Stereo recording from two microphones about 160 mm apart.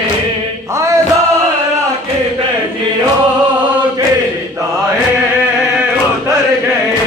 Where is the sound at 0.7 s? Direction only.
20° right (ahead or behind).